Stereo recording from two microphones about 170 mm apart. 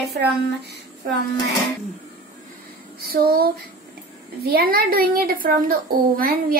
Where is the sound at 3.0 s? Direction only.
60° right (ahead or behind).